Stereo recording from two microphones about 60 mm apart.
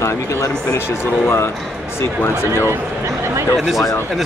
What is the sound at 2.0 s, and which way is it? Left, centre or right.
Speech, left.